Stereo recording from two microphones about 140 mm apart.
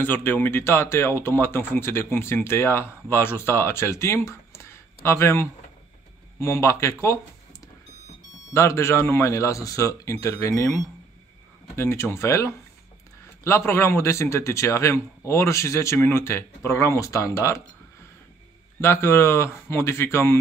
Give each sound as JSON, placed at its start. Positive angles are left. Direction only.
{"t": 0.0, "sound": "a man's voice", "side_deg": 15}
{"t": 8.5, "sound": "a man's voice", "side_deg": 20}
{"t": 11.7, "sound": "a man's voice", "side_deg": 15}
{"t": 18.8, "sound": "speech", "side_deg": 20}